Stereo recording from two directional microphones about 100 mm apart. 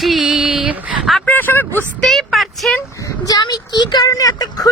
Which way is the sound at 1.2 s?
20° left (ahead or behind).